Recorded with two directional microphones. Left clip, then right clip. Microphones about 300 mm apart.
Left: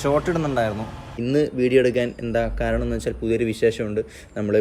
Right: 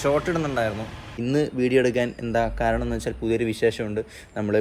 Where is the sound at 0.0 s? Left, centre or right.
Centre.